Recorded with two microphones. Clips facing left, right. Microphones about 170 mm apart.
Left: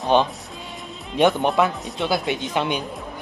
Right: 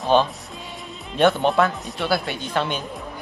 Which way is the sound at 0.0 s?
20° left (ahead or behind).